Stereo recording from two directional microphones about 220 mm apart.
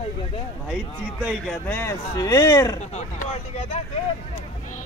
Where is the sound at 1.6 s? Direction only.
10° left (ahead or behind).